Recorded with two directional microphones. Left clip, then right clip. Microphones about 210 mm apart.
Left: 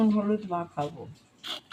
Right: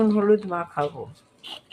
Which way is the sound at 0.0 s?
25° right (ahead or behind).